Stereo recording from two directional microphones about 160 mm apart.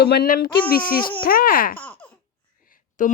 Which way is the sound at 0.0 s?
80° left.